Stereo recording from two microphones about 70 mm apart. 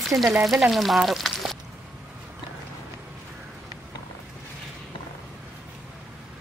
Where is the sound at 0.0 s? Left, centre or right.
Centre.